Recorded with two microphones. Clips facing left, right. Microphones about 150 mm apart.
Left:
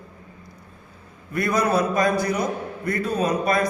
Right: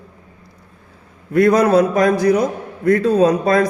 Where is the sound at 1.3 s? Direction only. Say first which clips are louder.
Right 9 dB; 90° right.